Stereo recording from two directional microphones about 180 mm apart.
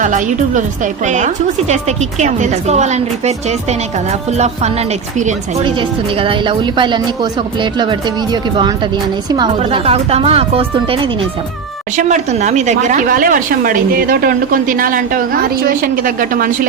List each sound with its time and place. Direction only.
0.0 s a woman's voice: 45° right (ahead or behind)
6.1 s a woman's voice: 30° right (ahead or behind)
11.9 s speech: 40° right (ahead or behind)